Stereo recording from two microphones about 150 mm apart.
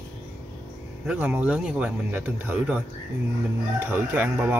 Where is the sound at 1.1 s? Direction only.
10° right (ahead or behind).